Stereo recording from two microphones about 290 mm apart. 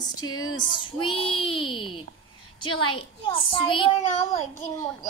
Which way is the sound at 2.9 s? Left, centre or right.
Centre.